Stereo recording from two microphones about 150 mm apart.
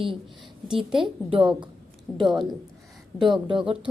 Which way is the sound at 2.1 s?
10° left (ahead or behind).